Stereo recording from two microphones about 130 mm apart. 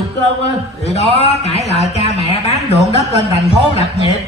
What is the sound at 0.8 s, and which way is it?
A man's voice, 55° left (ahead or behind).